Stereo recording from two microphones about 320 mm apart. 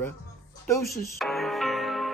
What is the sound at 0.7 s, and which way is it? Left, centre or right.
Music, centre.